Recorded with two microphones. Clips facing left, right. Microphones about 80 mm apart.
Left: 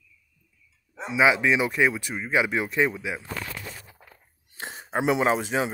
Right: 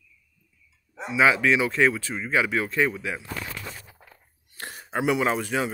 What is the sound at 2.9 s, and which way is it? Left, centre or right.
Speech, centre.